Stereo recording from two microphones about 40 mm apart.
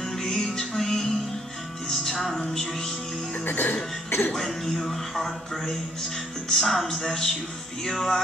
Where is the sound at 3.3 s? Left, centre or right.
Left.